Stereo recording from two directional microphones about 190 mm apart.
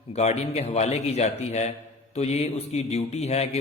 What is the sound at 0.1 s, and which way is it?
A man's voice, 35° left (ahead or behind).